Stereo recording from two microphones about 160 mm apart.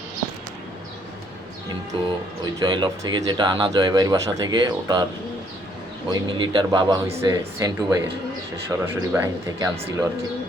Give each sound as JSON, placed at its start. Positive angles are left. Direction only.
{"t": 1.9, "sound": "speech", "side_deg": -30}
{"t": 6.1, "sound": "speech", "side_deg": -25}